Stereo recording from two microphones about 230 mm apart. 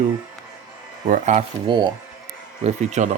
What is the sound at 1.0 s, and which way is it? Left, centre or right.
Speech, right.